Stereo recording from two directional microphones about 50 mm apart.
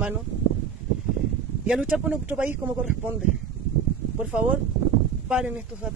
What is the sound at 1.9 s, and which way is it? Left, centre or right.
Speech, right.